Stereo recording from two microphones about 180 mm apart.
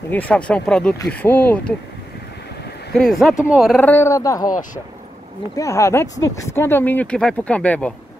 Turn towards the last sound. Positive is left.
turn(degrees=5)  # may be behind; listen again after turning